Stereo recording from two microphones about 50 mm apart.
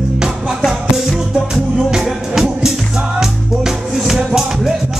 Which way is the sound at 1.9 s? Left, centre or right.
Centre.